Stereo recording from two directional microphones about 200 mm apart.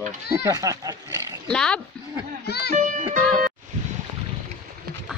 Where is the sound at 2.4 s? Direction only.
55° left (ahead or behind).